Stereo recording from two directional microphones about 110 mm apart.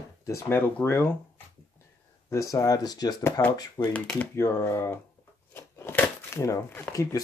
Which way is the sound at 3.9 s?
10° left (ahead or behind).